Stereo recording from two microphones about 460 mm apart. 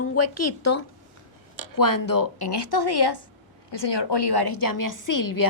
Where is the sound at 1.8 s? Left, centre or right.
Left.